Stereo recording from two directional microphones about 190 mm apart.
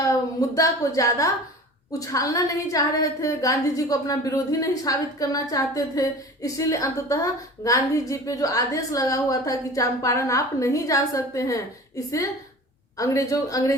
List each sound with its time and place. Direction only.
0.0 s a woman's voice: 20° left (ahead or behind)